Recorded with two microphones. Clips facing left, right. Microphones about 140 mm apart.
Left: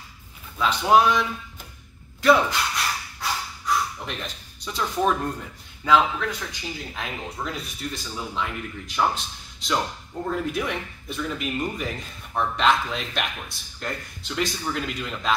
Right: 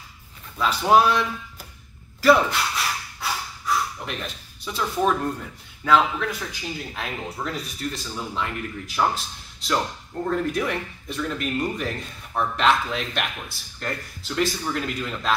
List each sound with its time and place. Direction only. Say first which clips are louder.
0.6 s speech: even; centre (ahead or behind)